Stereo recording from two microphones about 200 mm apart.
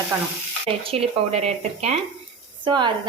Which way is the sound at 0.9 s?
30° right (ahead or behind).